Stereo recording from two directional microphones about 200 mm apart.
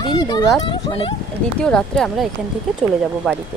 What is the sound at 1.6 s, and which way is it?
Speech, 5° left (ahead or behind).